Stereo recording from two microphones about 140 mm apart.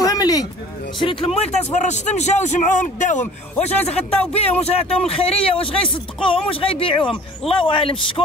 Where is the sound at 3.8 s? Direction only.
45° left (ahead or behind).